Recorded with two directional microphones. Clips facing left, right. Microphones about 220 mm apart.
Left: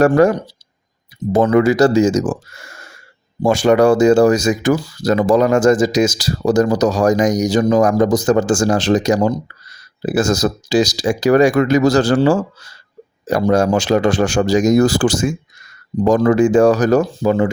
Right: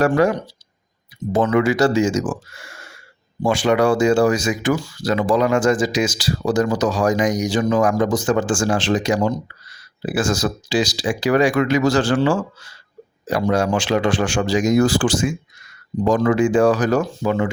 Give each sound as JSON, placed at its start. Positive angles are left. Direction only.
{"t": 0.0, "sound": "speech", "side_deg": 45}